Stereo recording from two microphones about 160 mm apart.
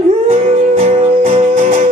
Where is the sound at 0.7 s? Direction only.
40° right (ahead or behind).